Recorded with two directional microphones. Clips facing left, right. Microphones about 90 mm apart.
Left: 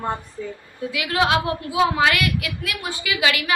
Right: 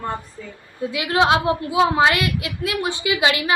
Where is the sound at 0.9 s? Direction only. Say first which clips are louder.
Right 3 dB; 25° right (ahead or behind).